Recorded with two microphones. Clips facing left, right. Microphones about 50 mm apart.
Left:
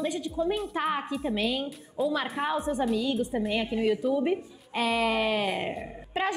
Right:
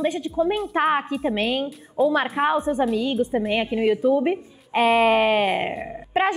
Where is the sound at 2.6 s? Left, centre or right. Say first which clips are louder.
Right 5 dB; right.